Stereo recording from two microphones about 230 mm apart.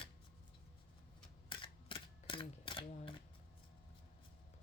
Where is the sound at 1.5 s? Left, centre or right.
Left.